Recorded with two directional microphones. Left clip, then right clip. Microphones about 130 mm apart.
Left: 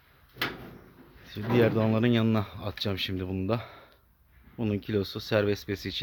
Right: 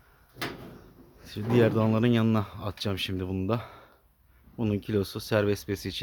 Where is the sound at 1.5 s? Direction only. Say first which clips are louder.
Right 1 dB; 20° right (ahead or behind).